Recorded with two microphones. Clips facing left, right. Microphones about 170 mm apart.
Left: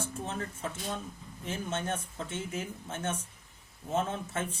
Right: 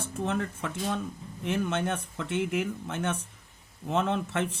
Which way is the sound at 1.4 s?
70° right (ahead or behind).